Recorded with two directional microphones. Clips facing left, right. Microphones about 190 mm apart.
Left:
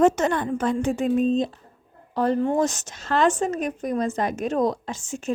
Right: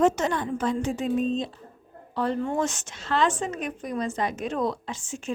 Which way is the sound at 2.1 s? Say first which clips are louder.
Left 5 dB; 40° left (ahead or behind).